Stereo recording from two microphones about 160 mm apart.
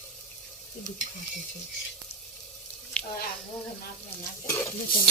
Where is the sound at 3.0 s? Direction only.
5° left (ahead or behind).